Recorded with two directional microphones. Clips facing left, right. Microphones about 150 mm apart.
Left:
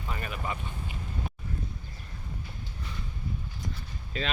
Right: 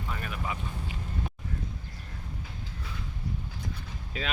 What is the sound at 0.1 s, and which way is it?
Vehicle, centre (ahead or behind).